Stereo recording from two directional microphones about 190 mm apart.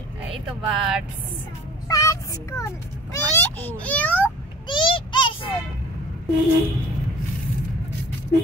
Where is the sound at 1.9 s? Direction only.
15° left (ahead or behind).